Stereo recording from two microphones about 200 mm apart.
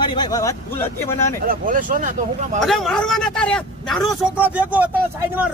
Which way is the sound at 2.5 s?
Centre (ahead or behind).